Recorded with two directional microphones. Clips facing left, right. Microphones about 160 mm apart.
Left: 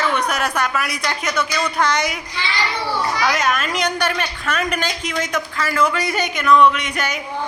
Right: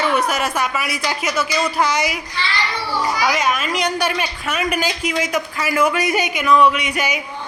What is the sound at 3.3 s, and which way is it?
A man's voice, centre (ahead or behind).